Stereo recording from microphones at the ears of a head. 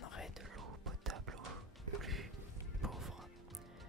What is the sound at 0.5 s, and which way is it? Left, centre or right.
Music, right.